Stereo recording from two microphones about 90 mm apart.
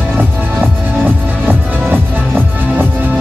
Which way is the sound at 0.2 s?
20° right (ahead or behind).